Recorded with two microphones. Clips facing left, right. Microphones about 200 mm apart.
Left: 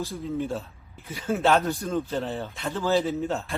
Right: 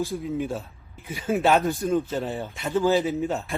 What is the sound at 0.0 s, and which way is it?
A man's voice, 15° right (ahead or behind).